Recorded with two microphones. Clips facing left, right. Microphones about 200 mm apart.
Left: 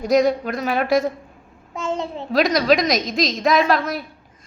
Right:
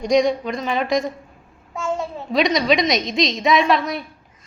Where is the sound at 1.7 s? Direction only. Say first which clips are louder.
Even; 20° left (ahead or behind).